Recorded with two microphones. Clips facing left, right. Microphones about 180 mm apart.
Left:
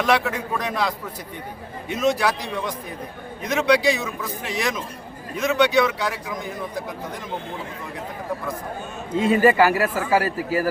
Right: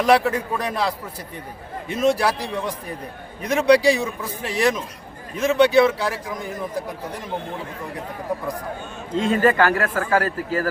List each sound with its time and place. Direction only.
0.1 s a man's voice: 35° right (ahead or behind)
2.0 s a man's voice: 35° right (ahead or behind)
3.5 s a man's voice: 35° right (ahead or behind)
9.1 s a man's voice: 5° left (ahead or behind)